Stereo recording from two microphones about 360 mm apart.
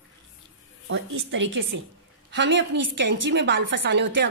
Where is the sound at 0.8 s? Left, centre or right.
Right.